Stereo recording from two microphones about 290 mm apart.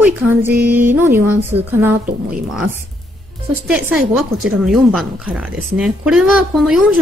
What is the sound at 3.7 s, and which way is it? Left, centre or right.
Speech, centre.